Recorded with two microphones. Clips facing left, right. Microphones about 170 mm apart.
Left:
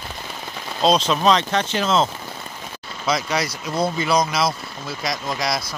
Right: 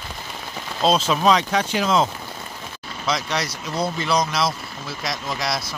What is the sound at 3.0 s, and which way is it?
Speech, centre (ahead or behind).